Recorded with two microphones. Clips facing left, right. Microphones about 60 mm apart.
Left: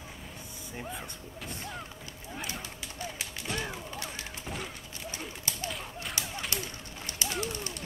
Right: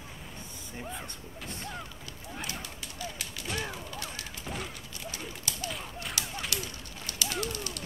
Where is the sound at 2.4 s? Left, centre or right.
Centre.